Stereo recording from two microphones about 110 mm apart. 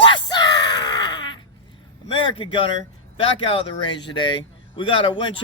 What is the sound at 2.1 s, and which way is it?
A man's voice, 55° left (ahead or behind).